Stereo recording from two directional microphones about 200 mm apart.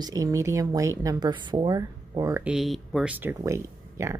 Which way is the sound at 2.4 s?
Centre (ahead or behind).